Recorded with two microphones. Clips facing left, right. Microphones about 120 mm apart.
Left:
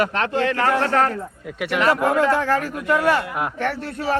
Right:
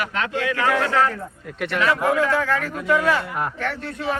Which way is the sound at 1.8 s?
45° left (ahead or behind).